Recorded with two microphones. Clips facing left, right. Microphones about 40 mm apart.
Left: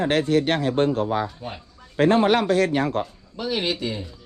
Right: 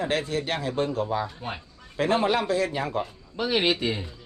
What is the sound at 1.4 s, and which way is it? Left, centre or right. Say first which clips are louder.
Speech: even; centre.